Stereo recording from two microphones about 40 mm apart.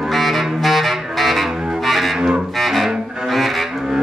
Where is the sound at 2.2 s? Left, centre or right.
Centre.